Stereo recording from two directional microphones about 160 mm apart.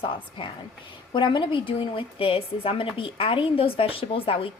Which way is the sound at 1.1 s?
30° left (ahead or behind).